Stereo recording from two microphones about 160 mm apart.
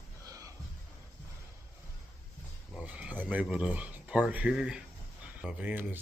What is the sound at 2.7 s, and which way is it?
Speech, 5° right (ahead or behind).